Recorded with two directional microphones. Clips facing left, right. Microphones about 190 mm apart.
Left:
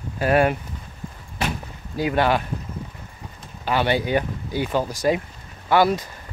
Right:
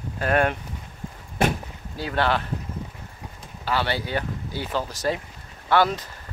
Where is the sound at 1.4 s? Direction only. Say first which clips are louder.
Right 4 dB; 50° right (ahead or behind).